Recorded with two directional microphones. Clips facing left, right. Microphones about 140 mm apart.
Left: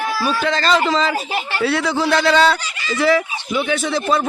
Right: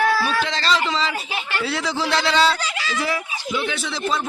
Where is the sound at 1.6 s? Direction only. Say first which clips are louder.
Left 7 dB; 60° left (ahead or behind).